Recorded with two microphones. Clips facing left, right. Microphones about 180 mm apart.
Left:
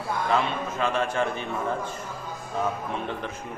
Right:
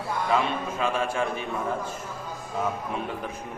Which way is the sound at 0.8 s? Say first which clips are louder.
Left 1 dB; 5° right (ahead or behind).